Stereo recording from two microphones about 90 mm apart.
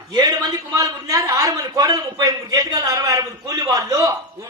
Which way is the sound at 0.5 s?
35° right (ahead or behind).